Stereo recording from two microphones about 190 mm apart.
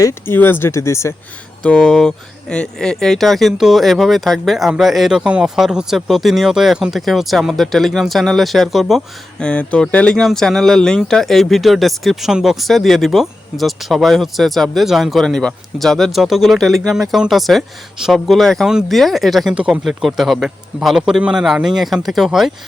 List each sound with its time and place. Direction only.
0.0 s speech: 10° left (ahead or behind)